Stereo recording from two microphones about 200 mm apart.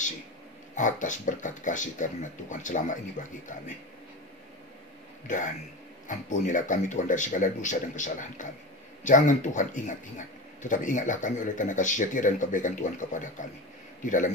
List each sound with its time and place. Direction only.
0.7 s speech: 40° left (ahead or behind)
5.2 s speech: 40° left (ahead or behind)